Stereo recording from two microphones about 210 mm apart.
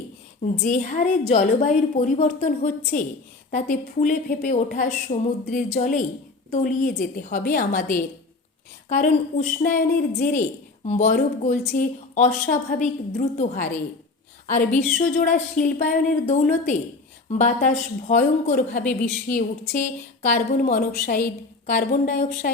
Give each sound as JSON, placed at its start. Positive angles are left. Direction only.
{"t": 0.6, "sound": "a woman's voice", "side_deg": 35}